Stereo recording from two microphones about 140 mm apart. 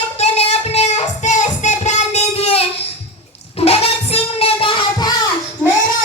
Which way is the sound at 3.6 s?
45° left (ahead or behind).